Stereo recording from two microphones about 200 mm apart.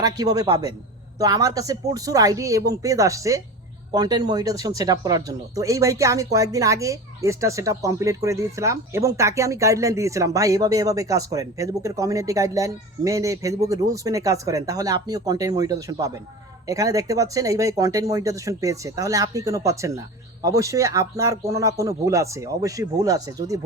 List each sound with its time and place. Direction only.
0.0 s a man's voice: 20° right (ahead or behind)